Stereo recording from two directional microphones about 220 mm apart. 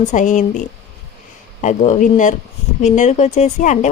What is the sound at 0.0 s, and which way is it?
Speech, 35° left (ahead or behind).